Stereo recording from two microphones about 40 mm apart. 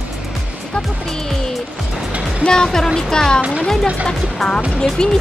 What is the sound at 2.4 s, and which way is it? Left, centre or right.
Speech, centre.